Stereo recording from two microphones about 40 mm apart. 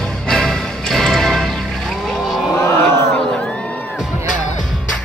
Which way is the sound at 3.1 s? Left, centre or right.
Left.